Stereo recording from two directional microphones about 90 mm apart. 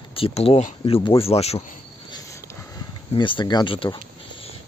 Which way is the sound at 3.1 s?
70° left (ahead or behind).